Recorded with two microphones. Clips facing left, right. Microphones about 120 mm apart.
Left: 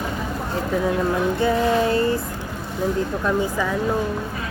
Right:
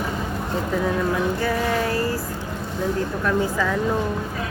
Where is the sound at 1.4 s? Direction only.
20° left (ahead or behind).